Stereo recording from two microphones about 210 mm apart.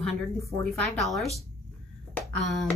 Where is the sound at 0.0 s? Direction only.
5° left (ahead or behind).